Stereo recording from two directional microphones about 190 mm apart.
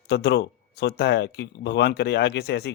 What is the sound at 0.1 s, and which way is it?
Speech, 60° left (ahead or behind).